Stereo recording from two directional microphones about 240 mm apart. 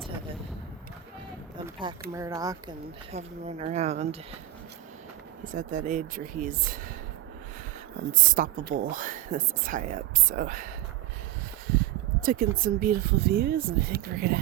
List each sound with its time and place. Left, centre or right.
1.5 s speech: centre
3.1 s speech: right
5.5 s speech: right
8.1 s speech: right
12.2 s speech: right